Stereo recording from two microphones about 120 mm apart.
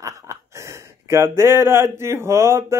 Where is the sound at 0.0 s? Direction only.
25° right (ahead or behind).